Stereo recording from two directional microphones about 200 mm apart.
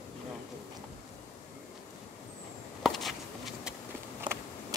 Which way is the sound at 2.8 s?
Centre (ahead or behind).